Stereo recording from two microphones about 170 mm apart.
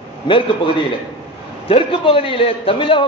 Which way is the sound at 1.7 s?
30° left (ahead or behind).